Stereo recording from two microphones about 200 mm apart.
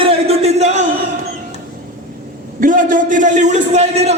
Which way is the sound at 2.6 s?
40° right (ahead or behind).